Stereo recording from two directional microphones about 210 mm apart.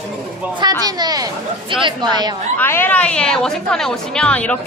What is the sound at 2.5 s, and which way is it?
A woman's voice, 10° left (ahead or behind).